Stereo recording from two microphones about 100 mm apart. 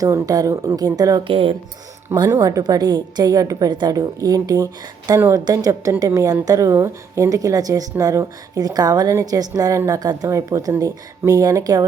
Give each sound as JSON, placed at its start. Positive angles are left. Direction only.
{"t": 0.0, "sound": "a woman's voice", "side_deg": -35}
{"t": 1.2, "sound": "speech", "side_deg": -65}
{"t": 2.3, "sound": "a woman's voice", "side_deg": -35}